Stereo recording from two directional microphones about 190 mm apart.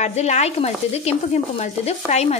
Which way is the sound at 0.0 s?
35° left (ahead or behind).